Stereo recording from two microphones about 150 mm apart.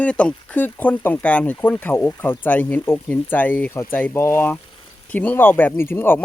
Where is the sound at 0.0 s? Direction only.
10° left (ahead or behind).